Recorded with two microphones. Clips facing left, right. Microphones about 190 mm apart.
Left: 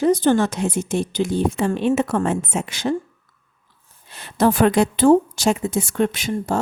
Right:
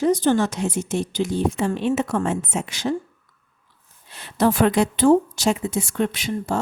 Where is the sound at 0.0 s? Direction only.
55° left (ahead or behind).